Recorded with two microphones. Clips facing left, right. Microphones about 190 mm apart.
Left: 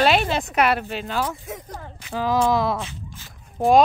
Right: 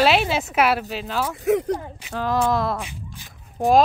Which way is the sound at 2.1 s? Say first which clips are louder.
Left 1 dB; centre (ahead or behind).